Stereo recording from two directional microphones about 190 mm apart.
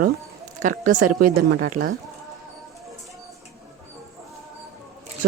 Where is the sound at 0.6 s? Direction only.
45° right (ahead or behind).